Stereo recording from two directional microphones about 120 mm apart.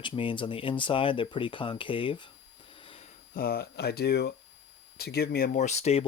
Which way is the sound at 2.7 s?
50° left (ahead or behind).